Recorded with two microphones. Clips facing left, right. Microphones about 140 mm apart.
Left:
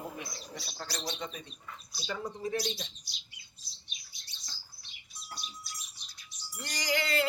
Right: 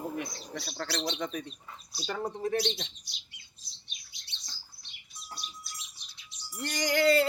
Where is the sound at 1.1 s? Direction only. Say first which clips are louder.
Right 6 dB; 55° right (ahead or behind).